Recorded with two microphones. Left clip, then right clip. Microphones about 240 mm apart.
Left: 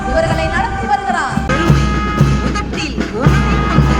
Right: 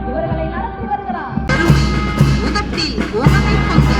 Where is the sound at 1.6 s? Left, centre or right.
Right.